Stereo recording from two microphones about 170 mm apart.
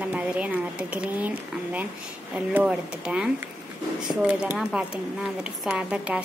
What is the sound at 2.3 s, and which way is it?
Speech, 5° right (ahead or behind).